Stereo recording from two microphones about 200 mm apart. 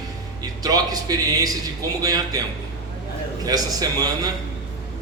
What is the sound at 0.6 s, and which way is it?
A man's voice, 20° right (ahead or behind).